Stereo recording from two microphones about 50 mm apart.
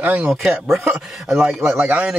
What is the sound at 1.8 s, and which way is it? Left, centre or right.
Speech, right.